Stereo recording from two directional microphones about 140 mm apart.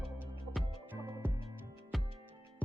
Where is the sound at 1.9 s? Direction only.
Centre (ahead or behind).